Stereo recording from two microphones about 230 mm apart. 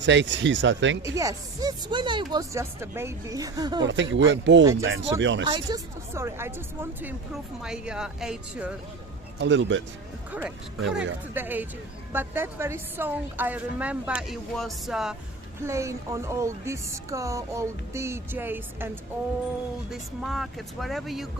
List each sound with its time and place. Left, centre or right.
0.0 s speech: right
1.0 s speech: centre
3.8 s speech: right
5.5 s speech: centre
7.6 s speech: centre
9.4 s speech: right
10.3 s speech: centre
15.6 s speech: centre
19.9 s speech: centre